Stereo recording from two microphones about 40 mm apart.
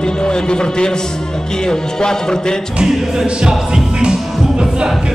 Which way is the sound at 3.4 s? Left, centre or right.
Centre.